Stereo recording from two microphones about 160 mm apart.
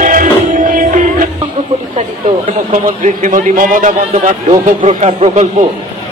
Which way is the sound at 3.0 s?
50° right (ahead or behind).